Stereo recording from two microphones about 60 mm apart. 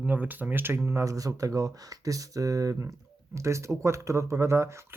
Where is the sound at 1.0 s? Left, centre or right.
Right.